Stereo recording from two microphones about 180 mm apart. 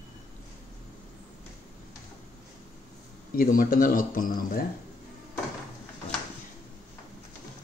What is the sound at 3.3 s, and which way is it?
Speech, 50° left (ahead or behind).